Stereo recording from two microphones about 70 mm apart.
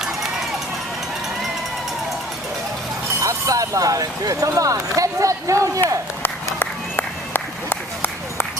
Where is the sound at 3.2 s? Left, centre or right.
Right.